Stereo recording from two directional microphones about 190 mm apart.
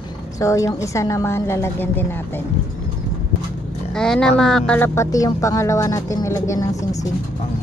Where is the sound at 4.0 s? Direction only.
5° left (ahead or behind).